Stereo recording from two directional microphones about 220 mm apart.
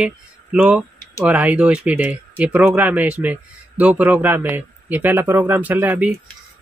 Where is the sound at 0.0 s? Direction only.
5° right (ahead or behind).